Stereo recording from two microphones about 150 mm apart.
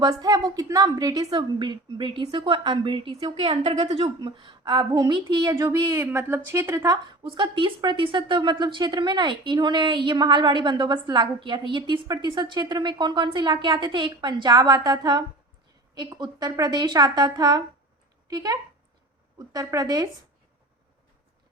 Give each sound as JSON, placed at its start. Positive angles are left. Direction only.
{"t": 0.0, "sound": "a woman's voice", "side_deg": -25}
{"t": 7.3, "sound": "a woman's voice", "side_deg": -35}